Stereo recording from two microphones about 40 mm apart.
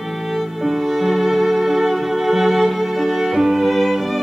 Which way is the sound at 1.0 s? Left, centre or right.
Centre.